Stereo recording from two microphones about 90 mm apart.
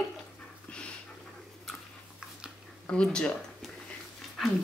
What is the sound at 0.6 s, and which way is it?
Pant, 10° left (ahead or behind).